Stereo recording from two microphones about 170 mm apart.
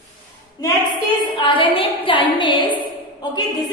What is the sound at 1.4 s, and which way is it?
A woman's voice, 30° left (ahead or behind).